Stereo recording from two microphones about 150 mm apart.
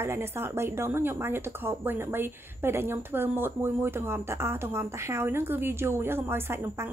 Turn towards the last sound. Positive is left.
turn(degrees=-15)  # may be behind; listen again after turning